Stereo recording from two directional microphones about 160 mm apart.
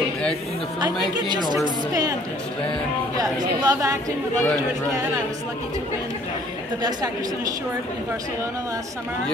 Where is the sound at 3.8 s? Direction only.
20° right (ahead or behind).